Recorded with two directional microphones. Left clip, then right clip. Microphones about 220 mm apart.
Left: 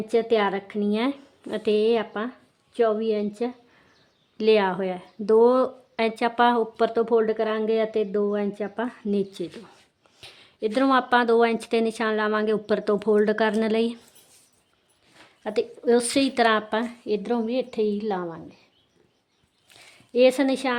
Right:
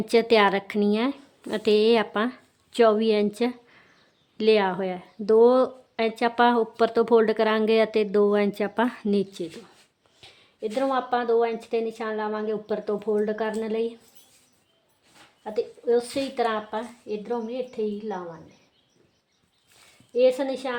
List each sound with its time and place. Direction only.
0.1 s a woman's voice: 10° right (ahead or behind)
4.4 s speech: centre (ahead or behind)
10.2 s speech: 25° left (ahead or behind)
15.4 s a woman's voice: 50° left (ahead or behind)
20.1 s a woman's voice: 50° left (ahead or behind)